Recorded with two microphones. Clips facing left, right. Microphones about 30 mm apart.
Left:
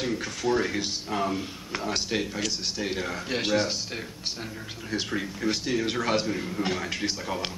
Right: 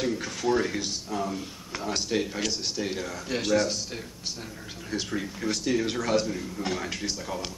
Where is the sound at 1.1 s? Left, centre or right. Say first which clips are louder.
Left 3 dB; left.